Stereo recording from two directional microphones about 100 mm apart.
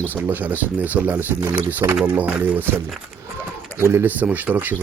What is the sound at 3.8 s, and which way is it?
Speech, 25° right (ahead or behind).